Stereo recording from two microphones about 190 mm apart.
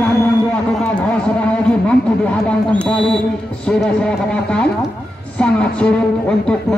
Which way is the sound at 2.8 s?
5° left (ahead or behind).